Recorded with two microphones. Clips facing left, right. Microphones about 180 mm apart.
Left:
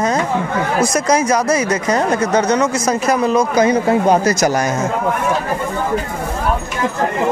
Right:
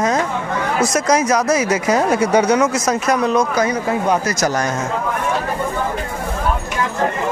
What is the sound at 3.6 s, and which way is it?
Speech, 30° left (ahead or behind).